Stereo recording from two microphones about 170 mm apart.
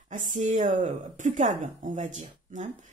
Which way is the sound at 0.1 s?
50° right (ahead or behind).